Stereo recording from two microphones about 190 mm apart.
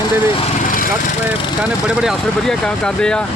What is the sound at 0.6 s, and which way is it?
Lawn mower, 45° left (ahead or behind).